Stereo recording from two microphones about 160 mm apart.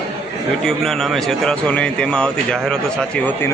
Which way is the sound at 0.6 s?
Centre (ahead or behind).